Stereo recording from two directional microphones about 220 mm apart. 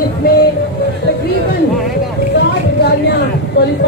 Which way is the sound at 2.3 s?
50° left (ahead or behind).